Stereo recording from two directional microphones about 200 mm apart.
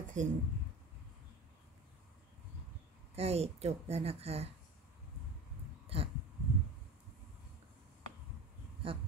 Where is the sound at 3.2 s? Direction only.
30° right (ahead or behind).